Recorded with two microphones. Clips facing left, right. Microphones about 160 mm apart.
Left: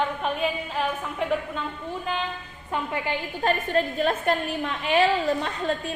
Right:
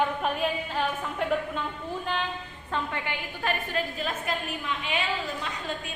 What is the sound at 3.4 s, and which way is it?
Speech, 50° left (ahead or behind).